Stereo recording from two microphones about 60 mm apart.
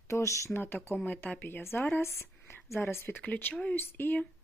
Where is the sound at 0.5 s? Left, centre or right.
Left.